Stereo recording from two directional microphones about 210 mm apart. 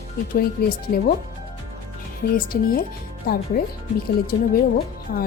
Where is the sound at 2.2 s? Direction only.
45° left (ahead or behind).